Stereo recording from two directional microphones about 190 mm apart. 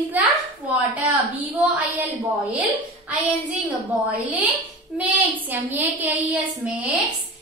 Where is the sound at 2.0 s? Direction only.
10° right (ahead or behind).